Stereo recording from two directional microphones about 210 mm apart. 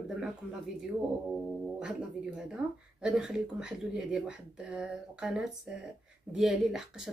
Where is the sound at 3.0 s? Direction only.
5° right (ahead or behind).